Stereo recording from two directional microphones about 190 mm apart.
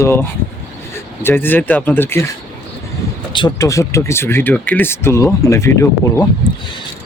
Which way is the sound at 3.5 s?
15° left (ahead or behind).